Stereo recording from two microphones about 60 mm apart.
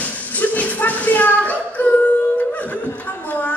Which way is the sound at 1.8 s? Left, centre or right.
Left.